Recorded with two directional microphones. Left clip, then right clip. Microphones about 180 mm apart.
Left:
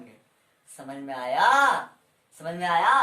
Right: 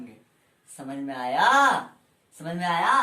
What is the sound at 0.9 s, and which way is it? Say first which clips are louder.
Speech: right 1 dB; 20° left (ahead or behind).